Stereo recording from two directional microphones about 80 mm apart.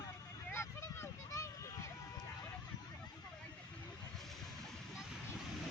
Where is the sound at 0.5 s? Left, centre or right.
Left.